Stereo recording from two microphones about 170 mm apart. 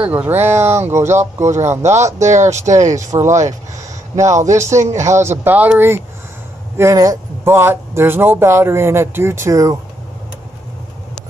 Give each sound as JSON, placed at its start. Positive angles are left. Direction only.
{"t": 0.0, "sound": "speech", "side_deg": -10}
{"t": 1.5, "sound": "speech", "side_deg": -40}
{"t": 2.7, "sound": "speech", "side_deg": -20}